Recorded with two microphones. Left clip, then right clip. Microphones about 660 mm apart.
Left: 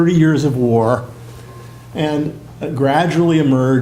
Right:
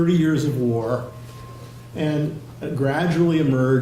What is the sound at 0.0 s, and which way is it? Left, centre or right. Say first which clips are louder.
Speech: left 6 dB; left.